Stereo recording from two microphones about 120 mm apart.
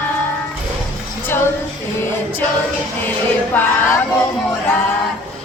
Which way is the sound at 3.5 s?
15° left (ahead or behind).